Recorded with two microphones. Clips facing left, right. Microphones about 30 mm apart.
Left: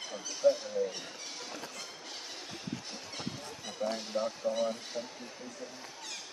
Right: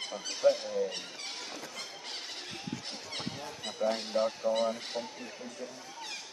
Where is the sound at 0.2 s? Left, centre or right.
Right.